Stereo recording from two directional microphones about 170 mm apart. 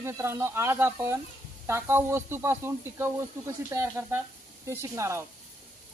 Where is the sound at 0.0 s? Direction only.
15° right (ahead or behind).